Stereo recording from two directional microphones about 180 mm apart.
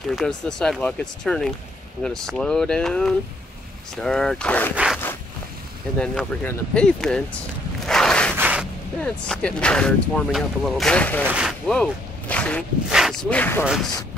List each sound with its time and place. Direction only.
0.1 s speech: 5° left (ahead or behind)
4.7 s zipper: 5° right (ahead or behind)
5.9 s speech: 5° left (ahead or behind)
8.4 s a sound: 10° right (ahead or behind)
9.0 s speech: 5° left (ahead or behind)
11.2 s speech: 5° right (ahead or behind)